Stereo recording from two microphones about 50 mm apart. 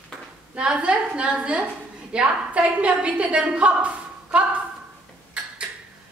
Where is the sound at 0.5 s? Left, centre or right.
Right.